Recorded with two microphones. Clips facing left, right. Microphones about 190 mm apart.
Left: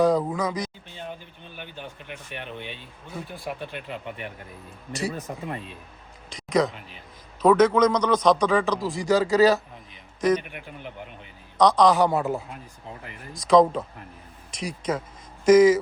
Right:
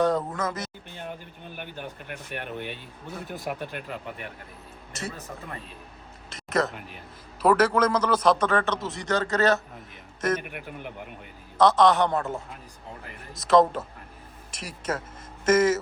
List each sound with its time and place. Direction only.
0.0 s a man's voice: centre (ahead or behind)
2.0 s speech: 50° right (ahead or behind)
4.9 s a man's voice: centre (ahead or behind)
6.3 s a man's voice: 5° right (ahead or behind)
11.5 s a man's voice: 5° right (ahead or behind)
13.5 s a man's voice: 5° right (ahead or behind)